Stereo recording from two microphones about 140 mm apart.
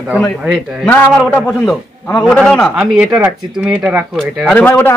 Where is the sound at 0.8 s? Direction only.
10° left (ahead or behind).